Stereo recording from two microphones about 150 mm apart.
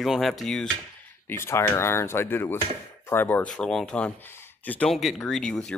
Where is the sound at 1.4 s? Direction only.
15° left (ahead or behind).